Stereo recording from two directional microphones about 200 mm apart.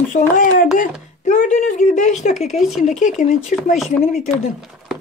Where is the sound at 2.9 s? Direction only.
40° left (ahead or behind).